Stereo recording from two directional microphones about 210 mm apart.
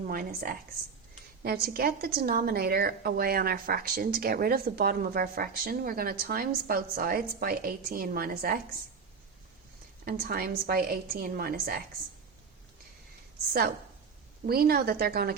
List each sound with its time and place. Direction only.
0.1 s a woman's voice: 40° right (ahead or behind)
10.1 s a woman's voice: 45° right (ahead or behind)
14.4 s a woman's voice: 45° right (ahead or behind)